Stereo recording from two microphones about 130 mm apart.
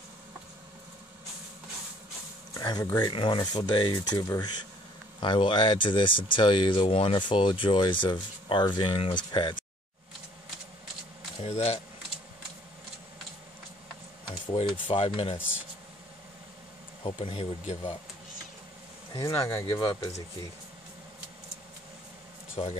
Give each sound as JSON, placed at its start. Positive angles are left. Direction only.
{"t": 2.5, "sound": "speech", "side_deg": 25}
{"t": 3.1, "sound": "speech", "side_deg": 40}
{"t": 11.4, "sound": "speech", "side_deg": 55}
{"t": 14.5, "sound": "speech", "side_deg": 45}
{"t": 17.0, "sound": "speech", "side_deg": 45}
{"t": 19.1, "sound": "speech", "side_deg": 20}
{"t": 22.6, "sound": "speech", "side_deg": 50}